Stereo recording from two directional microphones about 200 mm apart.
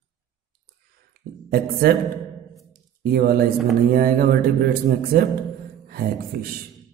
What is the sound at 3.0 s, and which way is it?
A man's voice, 50° right (ahead or behind).